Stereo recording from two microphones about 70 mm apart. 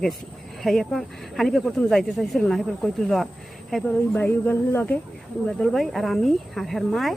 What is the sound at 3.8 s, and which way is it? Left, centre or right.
Speech, centre.